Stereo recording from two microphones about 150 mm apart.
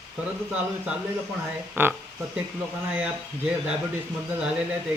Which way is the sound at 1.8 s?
15° right (ahead or behind).